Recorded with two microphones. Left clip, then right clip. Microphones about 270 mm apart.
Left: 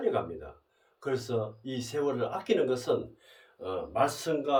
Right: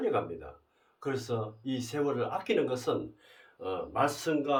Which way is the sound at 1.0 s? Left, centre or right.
Centre.